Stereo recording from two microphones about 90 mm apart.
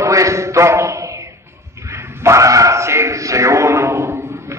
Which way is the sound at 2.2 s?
35° right (ahead or behind).